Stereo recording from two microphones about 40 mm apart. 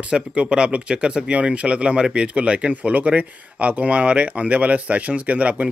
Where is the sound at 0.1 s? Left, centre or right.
Right.